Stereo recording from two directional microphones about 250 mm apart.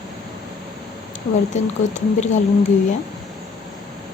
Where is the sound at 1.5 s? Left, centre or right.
Left.